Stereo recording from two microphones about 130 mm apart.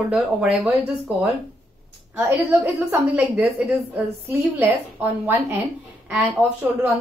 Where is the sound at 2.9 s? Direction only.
10° right (ahead or behind).